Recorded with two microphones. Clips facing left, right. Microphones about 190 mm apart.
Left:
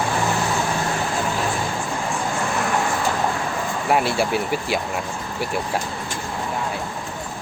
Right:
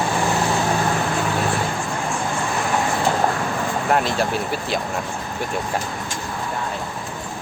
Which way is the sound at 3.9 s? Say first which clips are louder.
Left 1 dB; 10° left (ahead or behind).